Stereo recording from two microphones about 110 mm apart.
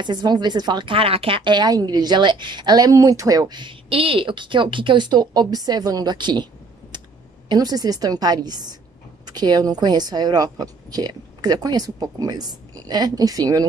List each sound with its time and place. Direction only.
0.0 s speech: 40° right (ahead or behind)
7.4 s speech: 35° right (ahead or behind)